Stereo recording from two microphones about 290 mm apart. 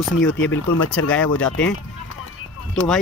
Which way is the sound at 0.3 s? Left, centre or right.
Left.